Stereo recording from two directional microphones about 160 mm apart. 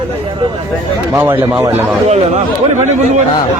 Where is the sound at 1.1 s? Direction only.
15° right (ahead or behind).